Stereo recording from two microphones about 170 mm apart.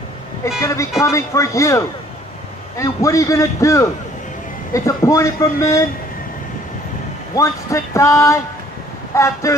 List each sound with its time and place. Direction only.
0.7 s a man's voice: 20° left (ahead or behind)
7.3 s a man's voice: 20° left (ahead or behind)